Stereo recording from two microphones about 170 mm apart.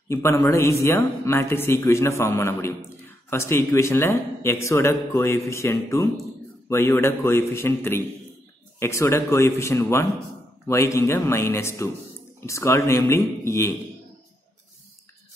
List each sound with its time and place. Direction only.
0.1 s a man's voice: 15° left (ahead or behind)